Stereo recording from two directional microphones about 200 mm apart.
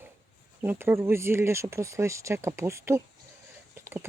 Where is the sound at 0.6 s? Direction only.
10° right (ahead or behind).